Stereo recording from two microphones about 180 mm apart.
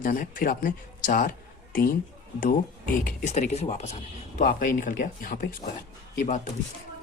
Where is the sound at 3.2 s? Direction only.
40° left (ahead or behind).